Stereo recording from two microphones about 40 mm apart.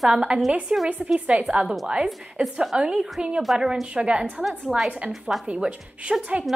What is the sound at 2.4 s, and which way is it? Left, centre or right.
A woman's voice, centre.